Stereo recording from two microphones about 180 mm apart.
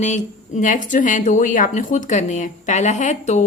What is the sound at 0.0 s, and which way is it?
A woman's voice, 40° left (ahead or behind).